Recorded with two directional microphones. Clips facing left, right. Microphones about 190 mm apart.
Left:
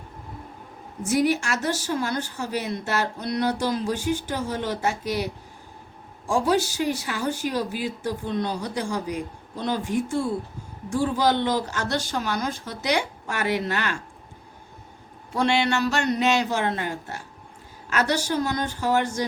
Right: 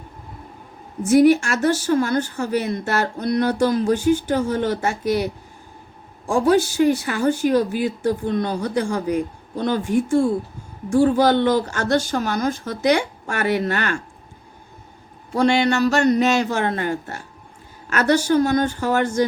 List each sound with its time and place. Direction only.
1.1 s speech: 50° right (ahead or behind)
15.3 s speech: 40° right (ahead or behind)